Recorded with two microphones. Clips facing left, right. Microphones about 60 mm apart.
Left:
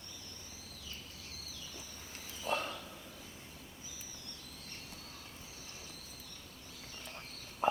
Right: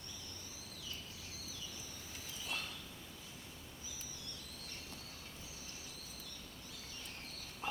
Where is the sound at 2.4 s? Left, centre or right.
Left.